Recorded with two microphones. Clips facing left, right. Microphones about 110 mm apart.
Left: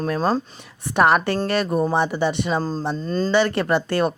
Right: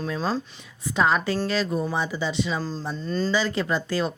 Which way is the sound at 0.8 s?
65° left (ahead or behind).